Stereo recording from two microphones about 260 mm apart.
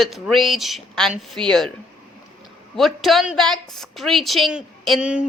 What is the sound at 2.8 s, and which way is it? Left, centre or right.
Speech, centre.